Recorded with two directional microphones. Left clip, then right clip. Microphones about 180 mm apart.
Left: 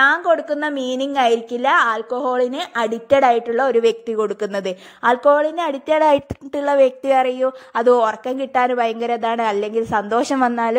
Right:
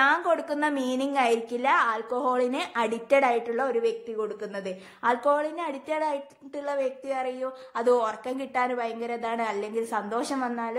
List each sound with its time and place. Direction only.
0.0 s a woman's voice: 25° left (ahead or behind)
3.7 s speech: 50° left (ahead or behind)
5.1 s a woman's voice: 35° left (ahead or behind)